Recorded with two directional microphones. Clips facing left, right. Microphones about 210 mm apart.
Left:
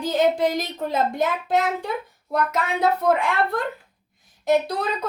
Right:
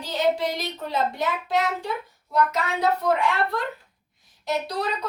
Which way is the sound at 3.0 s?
50° left (ahead or behind).